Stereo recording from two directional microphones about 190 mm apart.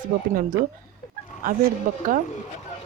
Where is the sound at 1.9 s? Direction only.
45° right (ahead or behind).